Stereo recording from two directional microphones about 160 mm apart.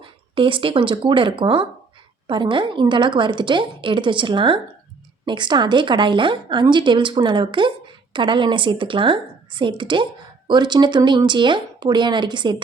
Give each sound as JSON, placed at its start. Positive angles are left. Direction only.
{"t": 0.0, "sound": "a woman's voice", "side_deg": -30}